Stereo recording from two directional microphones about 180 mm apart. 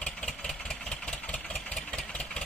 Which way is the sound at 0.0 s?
5° left (ahead or behind).